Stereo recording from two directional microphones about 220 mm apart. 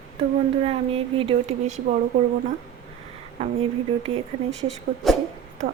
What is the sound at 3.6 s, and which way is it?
Speech, 25° right (ahead or behind).